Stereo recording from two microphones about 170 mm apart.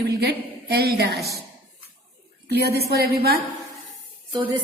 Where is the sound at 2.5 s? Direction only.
70° right (ahead or behind).